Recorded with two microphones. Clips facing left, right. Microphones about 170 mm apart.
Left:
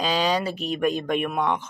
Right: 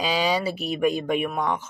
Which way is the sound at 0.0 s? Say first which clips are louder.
Even; 10° right (ahead or behind).